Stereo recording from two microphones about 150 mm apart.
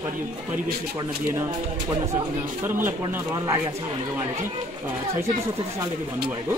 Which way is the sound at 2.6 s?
15° right (ahead or behind).